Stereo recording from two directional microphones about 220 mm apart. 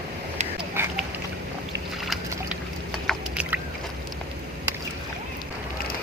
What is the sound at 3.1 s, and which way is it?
Boat, 5° right (ahead or behind).